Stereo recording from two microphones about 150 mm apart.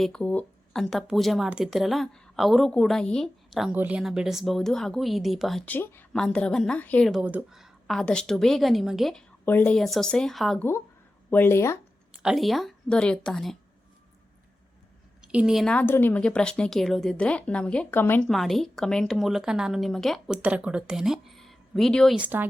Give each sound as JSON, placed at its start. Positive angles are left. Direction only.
{"t": 0.0, "sound": "speech", "side_deg": 5}
{"t": 5.6, "sound": "a woman's voice", "side_deg": 15}
{"t": 7.1, "sound": "speech", "side_deg": -10}
{"t": 9.5, "sound": "a woman's voice", "side_deg": 15}
{"t": 9.7, "sound": "speech", "side_deg": 0}
{"t": 11.3, "sound": "a woman's voice", "side_deg": 15}
{"t": 12.2, "sound": "speech", "side_deg": 0}
{"t": 15.2, "sound": "a woman's voice", "side_deg": -5}
{"t": 18.3, "sound": "speech", "side_deg": 0}
{"t": 22.2, "sound": "speech", "side_deg": -15}